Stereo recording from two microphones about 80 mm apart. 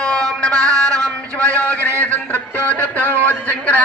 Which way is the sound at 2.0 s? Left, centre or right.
Left.